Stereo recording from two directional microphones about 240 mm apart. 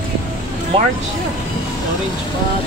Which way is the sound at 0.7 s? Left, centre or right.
Right.